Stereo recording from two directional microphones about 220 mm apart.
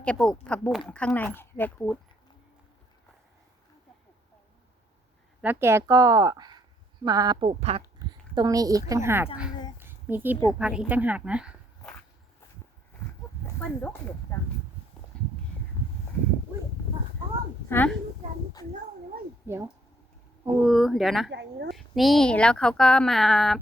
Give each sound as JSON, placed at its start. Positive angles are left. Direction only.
{"t": 0.0, "sound": "speech", "side_deg": 5}
{"t": 5.4, "sound": "speech", "side_deg": -10}
{"t": 8.4, "sound": "speech", "side_deg": -15}
{"t": 9.7, "sound": "a sound", "side_deg": -10}
{"t": 10.6, "sound": "speech", "side_deg": -5}
{"t": 13.4, "sound": "a woman's voice", "side_deg": 10}
{"t": 15.1, "sound": "a sound", "side_deg": 5}
{"t": 17.7, "sound": "a child's voice", "side_deg": 10}
{"t": 19.5, "sound": "speech", "side_deg": -10}
{"t": 20.6, "sound": "speech", "side_deg": 0}
{"t": 21.2, "sound": "speech", "side_deg": -50}
{"t": 21.8, "sound": "speech", "side_deg": 0}